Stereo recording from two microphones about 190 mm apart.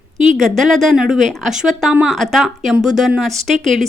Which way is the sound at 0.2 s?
40° right (ahead or behind).